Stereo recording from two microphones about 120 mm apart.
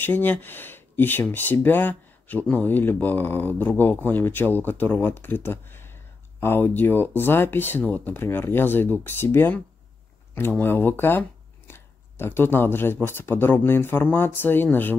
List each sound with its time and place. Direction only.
0.0 s speech: 15° left (ahead or behind)